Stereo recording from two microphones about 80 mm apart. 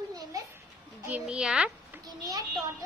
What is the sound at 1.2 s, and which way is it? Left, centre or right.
Speech, centre.